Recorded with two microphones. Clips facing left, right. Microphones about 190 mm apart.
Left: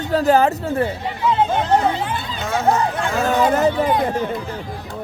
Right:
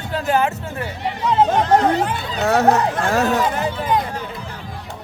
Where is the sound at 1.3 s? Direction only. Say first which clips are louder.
Right 3 dB; 40° right (ahead or behind).